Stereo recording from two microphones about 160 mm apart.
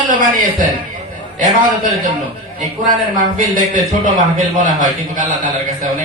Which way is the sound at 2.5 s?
55° right (ahead or behind).